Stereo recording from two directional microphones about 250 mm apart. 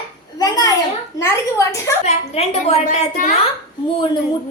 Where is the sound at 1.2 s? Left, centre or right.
Centre.